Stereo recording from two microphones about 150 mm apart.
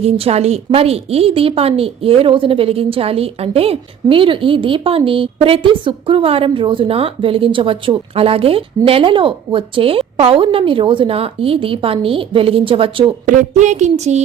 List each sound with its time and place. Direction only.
0.0 s a woman's voice: 45° right (ahead or behind)
13.2 s speech: 55° right (ahead or behind)